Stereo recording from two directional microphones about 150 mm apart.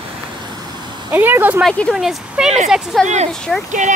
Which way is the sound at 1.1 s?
10° right (ahead or behind).